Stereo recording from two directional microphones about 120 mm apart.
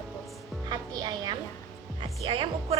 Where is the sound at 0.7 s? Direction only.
35° right (ahead or behind).